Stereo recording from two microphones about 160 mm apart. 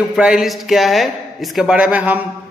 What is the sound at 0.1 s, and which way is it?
A man's voice, centre (ahead or behind).